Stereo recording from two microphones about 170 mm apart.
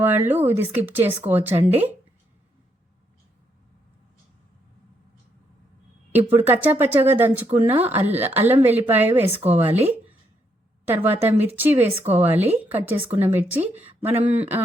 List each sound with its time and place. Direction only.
0.0 s speech: 10° right (ahead or behind)
6.1 s speech: 10° right (ahead or behind)
10.8 s speech: 10° right (ahead or behind)